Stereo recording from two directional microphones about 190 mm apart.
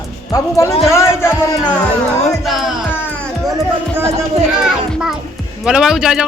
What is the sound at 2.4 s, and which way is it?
Music, centre (ahead or behind).